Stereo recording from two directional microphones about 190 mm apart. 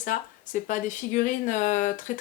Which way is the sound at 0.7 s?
40° left (ahead or behind).